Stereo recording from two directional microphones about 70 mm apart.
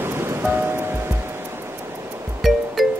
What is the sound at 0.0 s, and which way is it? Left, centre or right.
Music, right.